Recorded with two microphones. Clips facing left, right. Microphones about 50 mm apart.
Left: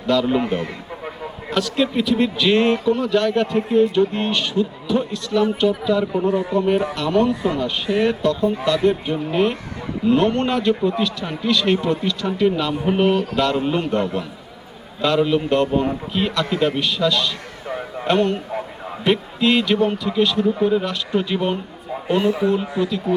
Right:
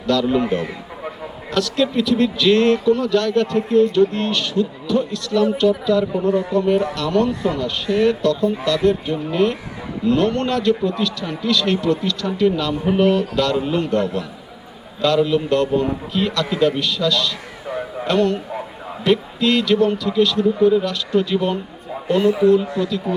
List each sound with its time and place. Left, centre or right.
0.1 s a man's voice: centre
0.4 s a sound: centre
1.5 s a man's voice: centre
7.3 s speech: centre
7.6 s a man's voice: centre